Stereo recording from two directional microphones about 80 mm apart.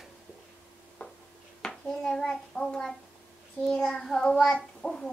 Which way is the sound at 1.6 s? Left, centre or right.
Centre.